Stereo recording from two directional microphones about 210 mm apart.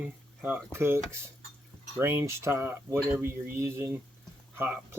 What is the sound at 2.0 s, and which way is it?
Speech, 15° right (ahead or behind).